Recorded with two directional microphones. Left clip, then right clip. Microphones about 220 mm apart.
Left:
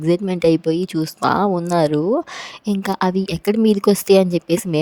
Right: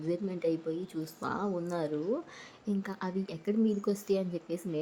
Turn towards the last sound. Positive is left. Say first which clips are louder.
# left 17 dB
turn(degrees=45)  # may be behind; listen again after turning